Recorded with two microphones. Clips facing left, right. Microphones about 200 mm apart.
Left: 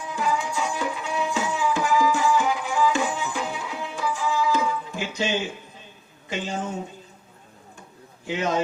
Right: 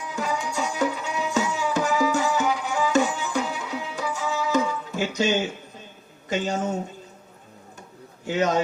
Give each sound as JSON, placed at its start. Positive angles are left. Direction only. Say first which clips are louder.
{"t": 0.2, "sound": "music", "louder": "left 1 dB", "side_deg": -40}
{"t": 6.2, "sound": "speech", "louder": "right 4 dB", "side_deg": -40}
{"t": 8.3, "sound": "speech", "louder": "right 2 dB", "side_deg": -40}